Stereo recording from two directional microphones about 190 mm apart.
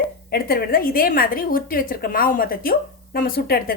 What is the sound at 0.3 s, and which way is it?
A woman's voice, 55° left (ahead or behind).